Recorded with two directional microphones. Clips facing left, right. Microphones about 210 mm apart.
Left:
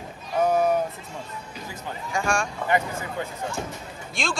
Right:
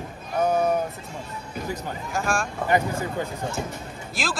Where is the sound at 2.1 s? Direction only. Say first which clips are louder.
Left 1 dB; centre (ahead or behind).